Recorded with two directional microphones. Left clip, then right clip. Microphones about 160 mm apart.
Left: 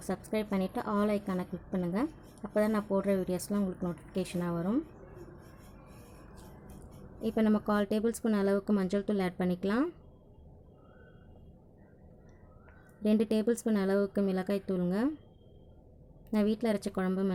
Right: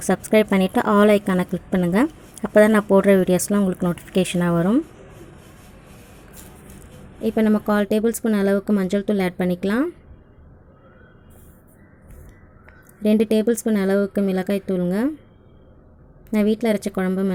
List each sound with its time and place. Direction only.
0.0 s a woman's voice: 30° right (ahead or behind)
7.2 s speech: 15° right (ahead or behind)
13.0 s speech: 15° right (ahead or behind)
16.3 s speech: 15° right (ahead or behind)